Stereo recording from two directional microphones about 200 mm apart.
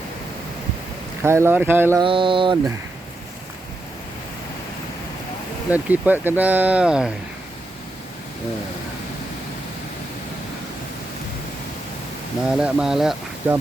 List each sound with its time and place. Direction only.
1.2 s speech: 15° right (ahead or behind)
2.0 s a sound: 25° right (ahead or behind)
5.7 s speech: 10° right (ahead or behind)
12.5 s speech: 5° right (ahead or behind)